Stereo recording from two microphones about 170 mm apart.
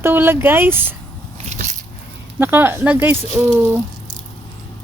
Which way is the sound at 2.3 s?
10° right (ahead or behind).